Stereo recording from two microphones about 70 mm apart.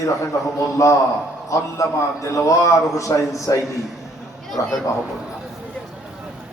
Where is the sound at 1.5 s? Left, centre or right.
Left.